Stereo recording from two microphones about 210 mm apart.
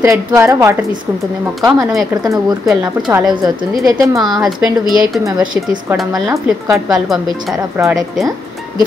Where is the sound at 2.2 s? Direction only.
20° right (ahead or behind).